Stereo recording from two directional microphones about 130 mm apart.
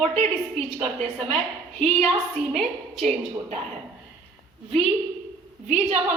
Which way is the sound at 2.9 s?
5° right (ahead or behind).